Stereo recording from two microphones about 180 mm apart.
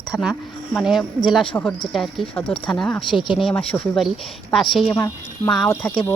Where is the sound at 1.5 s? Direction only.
10° left (ahead or behind).